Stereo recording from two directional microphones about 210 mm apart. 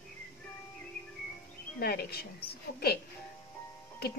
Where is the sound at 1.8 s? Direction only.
45° left (ahead or behind).